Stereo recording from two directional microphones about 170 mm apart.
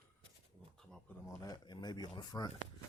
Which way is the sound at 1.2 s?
20° left (ahead or behind).